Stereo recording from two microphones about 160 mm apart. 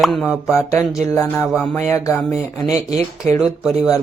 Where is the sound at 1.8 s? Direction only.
15° left (ahead or behind).